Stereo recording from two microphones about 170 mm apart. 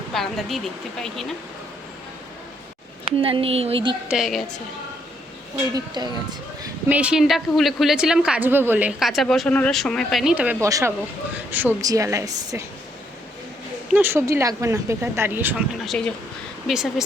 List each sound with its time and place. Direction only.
0.1 s a woman's voice: centre (ahead or behind)
3.2 s speech: 30° right (ahead or behind)
4.1 s a woman's voice: centre (ahead or behind)
5.7 s a woman's voice: 25° right (ahead or behind)
6.8 s a woman's voice: 10° right (ahead or behind)
13.9 s speech: 15° right (ahead or behind)
15.9 s a woman's voice: 5° left (ahead or behind)